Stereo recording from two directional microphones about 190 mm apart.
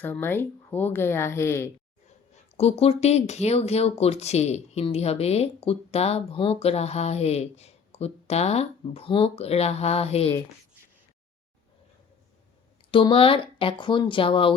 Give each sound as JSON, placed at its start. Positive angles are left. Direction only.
{"t": 0.0, "sound": "speech", "side_deg": 10}
{"t": 2.6, "sound": "speech", "side_deg": 30}
{"t": 12.9, "sound": "speech", "side_deg": 25}